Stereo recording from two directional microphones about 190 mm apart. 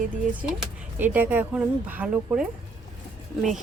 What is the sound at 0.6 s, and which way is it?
A woman's voice, 10° right (ahead or behind).